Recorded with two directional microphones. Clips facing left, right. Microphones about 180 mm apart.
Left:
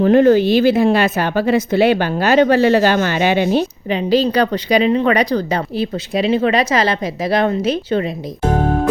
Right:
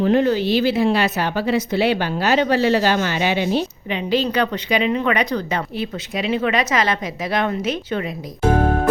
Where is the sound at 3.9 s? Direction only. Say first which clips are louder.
Left 5 dB; 35° left (ahead or behind).